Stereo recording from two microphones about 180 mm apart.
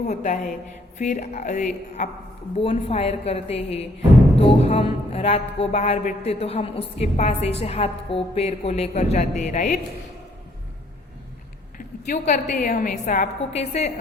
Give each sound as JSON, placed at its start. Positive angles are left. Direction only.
{"t": 0.1, "sound": "a woman's voice", "side_deg": 40}
{"t": 12.0, "sound": "a woman's voice", "side_deg": 40}